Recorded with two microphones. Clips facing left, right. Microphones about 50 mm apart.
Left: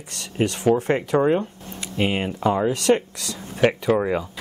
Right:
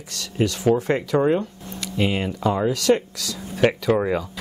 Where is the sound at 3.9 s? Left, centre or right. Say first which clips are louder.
Even; centre.